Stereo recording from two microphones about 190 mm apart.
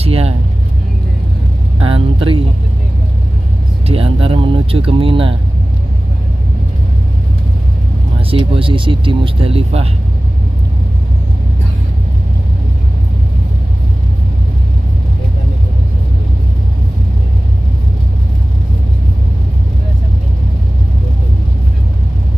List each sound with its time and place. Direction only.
0.0 s speech: 30° right (ahead or behind)
1.8 s vehicle: 30° right (ahead or behind)
3.8 s speech: 30° right (ahead or behind)
8.3 s speech: 30° right (ahead or behind)